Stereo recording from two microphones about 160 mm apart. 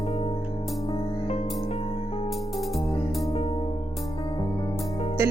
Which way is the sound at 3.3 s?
40° left (ahead or behind).